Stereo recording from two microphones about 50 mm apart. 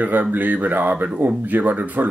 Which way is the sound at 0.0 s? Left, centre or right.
Right.